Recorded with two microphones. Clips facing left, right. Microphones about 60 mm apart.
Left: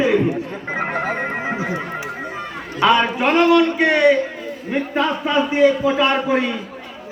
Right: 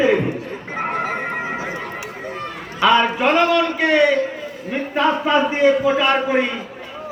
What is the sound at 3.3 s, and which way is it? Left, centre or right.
Speech, left.